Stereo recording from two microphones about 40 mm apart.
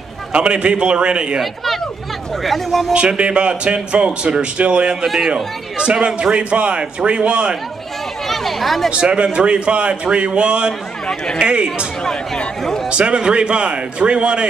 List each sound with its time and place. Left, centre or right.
0.3 s a man's voice: right
2.4 s speech: centre
2.9 s a man's voice: right
5.0 s a man's voice: centre
5.3 s a man's voice: right
8.3 s chatter: centre
8.9 s a man's voice: right